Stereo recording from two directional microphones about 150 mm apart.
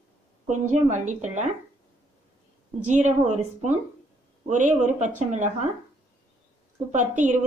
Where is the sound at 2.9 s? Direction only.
50° right (ahead or behind).